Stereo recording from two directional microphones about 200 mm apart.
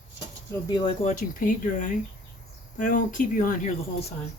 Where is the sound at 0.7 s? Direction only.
20° left (ahead or behind).